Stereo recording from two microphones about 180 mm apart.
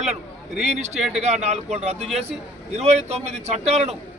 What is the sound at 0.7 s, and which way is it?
A man's voice, 40° right (ahead or behind).